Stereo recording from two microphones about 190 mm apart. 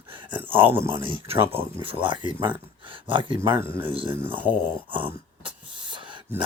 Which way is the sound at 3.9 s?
25° right (ahead or behind).